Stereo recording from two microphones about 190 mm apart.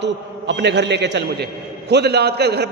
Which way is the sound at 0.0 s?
65° right (ahead or behind).